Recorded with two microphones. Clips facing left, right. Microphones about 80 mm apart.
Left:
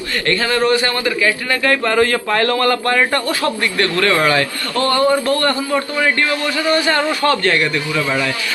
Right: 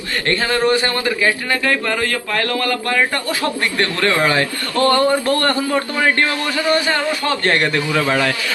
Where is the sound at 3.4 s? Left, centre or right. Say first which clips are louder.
Left 1 dB; right.